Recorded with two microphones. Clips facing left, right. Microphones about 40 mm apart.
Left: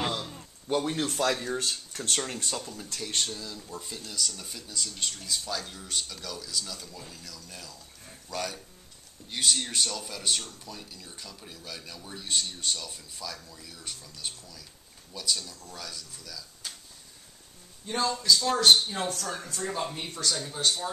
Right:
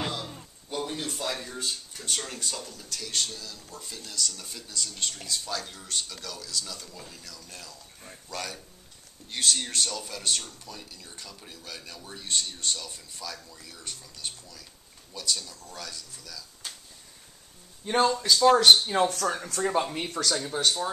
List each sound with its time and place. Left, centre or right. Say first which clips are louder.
0.9 s speech: left 5 dB; left
1.3 s speech: left 5 dB; left
1.6 s speech: left 2 dB; left
2.2 s speech: left 2 dB; left; by 16.7 s centre
17.8 s speech: right 3 dB; right